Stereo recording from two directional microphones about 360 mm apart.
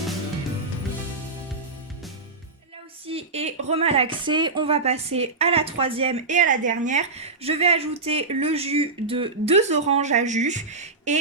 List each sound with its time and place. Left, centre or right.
3.1 s speech: centre